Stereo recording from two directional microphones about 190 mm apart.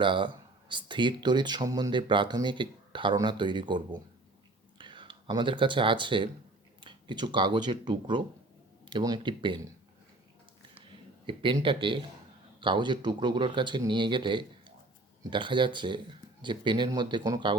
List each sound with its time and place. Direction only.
0.0 s speech: 25° right (ahead or behind)
4.8 s speech: 25° right (ahead or behind)
11.3 s speech: 25° right (ahead or behind)